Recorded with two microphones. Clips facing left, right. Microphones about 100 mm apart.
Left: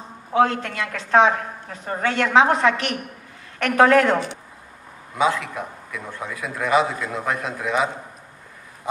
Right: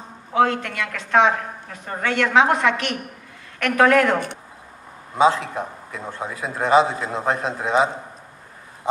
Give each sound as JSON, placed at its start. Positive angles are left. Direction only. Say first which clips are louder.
{"t": 0.3, "sound": "a woman's voice", "louder": "even", "side_deg": 30}
{"t": 5.1, "sound": "a man's voice", "louder": "right 4 dB", "side_deg": -30}